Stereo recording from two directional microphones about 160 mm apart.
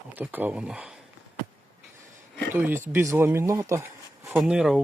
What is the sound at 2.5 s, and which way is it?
Speech, 15° right (ahead or behind).